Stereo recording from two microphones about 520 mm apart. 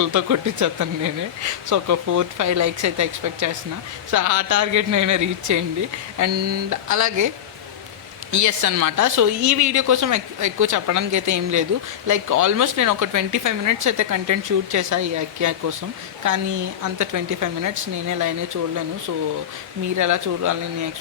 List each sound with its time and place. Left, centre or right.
0.0 s speech: right
8.3 s speech: right
20.0 s speech: right